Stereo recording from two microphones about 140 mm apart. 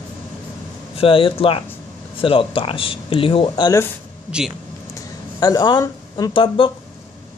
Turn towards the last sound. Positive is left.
turn(degrees=40)  # may be behind; listen again after turning